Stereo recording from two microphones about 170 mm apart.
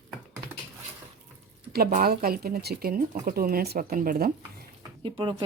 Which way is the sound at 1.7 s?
65° right (ahead or behind).